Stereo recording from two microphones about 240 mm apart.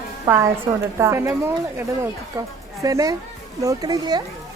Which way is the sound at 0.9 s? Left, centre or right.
Centre.